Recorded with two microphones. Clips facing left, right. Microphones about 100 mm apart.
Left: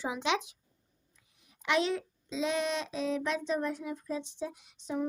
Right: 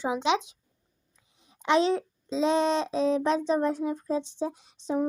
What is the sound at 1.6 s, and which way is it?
A child's voice, 30° right (ahead or behind).